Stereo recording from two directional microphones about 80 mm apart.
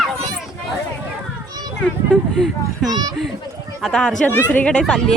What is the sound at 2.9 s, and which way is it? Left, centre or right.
Speech, right.